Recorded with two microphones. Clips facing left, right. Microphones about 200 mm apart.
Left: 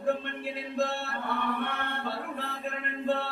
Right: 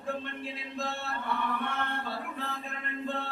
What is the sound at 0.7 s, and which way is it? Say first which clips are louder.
Mantra: left 6 dB; 55° left (ahead or behind).